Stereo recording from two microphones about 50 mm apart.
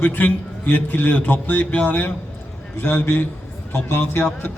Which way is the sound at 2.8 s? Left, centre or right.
Left.